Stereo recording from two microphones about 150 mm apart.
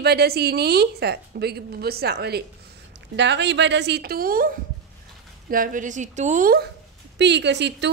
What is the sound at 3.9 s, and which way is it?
A woman's voice, 85° right.